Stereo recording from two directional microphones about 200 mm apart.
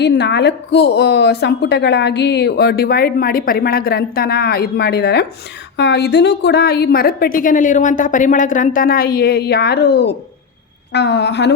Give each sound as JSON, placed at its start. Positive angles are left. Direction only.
{"t": 0.0, "sound": "a woman's voice", "side_deg": 60}